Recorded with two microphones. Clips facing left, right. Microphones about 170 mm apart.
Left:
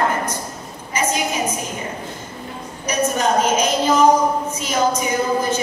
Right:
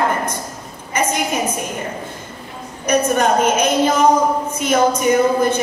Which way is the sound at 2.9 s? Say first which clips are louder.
Right 4 dB; 60° right (ahead or behind).